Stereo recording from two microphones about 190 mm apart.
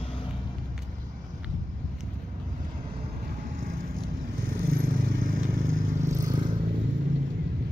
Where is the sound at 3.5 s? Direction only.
50° right (ahead or behind).